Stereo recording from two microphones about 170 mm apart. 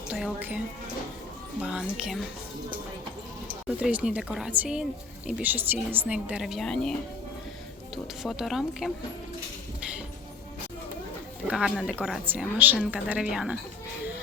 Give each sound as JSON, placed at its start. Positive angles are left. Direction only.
{"t": 0.1, "sound": "a woman's voice", "side_deg": -10}
{"t": 1.6, "sound": "a woman's voice", "side_deg": -5}
{"t": 3.8, "sound": "a woman's voice", "side_deg": -5}
{"t": 8.2, "sound": "a woman's voice", "side_deg": 0}
{"t": 11.4, "sound": "a woman's voice", "side_deg": -5}